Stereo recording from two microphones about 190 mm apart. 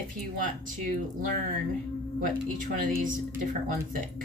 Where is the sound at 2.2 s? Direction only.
45° right (ahead or behind).